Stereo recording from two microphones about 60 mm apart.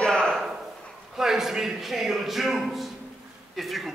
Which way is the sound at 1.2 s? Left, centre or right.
Centre.